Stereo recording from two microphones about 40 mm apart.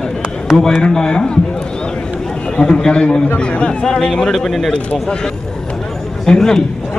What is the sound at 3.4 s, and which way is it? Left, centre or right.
Speech, left.